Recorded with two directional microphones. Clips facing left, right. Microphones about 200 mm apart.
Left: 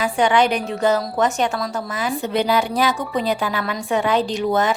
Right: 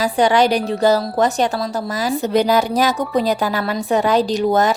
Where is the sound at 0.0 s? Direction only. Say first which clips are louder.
Right 2 dB; 35° right (ahead or behind).